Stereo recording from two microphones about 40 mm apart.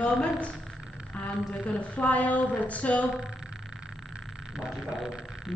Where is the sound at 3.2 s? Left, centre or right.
Centre.